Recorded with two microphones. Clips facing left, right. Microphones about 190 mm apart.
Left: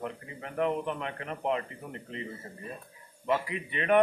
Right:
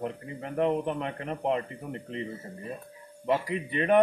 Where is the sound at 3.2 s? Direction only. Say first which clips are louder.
Right 2 dB; 35° right (ahead or behind).